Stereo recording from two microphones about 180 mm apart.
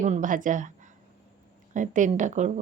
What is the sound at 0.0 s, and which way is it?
A woman's voice, 45° right (ahead or behind).